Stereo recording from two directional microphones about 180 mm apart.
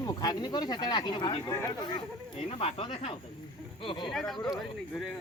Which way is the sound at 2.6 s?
30° left (ahead or behind).